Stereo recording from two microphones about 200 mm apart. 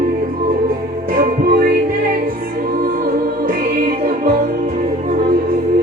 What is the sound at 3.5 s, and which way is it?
Music, 45° right (ahead or behind).